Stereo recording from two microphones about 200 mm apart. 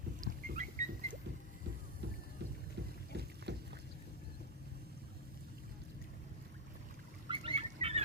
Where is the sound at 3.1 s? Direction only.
55° right (ahead or behind).